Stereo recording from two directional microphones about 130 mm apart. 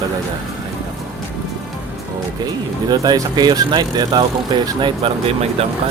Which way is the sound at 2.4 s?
30° right (ahead or behind).